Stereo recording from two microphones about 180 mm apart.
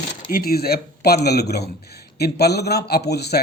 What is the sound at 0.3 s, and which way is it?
Speech, 55° left (ahead or behind).